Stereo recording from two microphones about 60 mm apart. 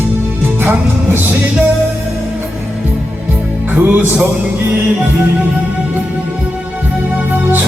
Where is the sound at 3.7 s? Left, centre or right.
Right.